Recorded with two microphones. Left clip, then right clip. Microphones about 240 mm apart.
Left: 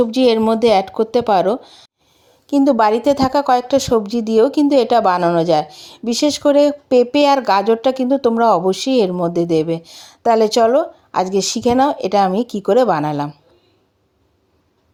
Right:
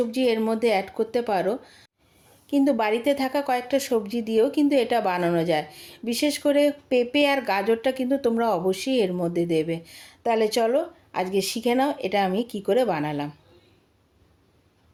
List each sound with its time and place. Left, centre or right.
0.0 s speech: left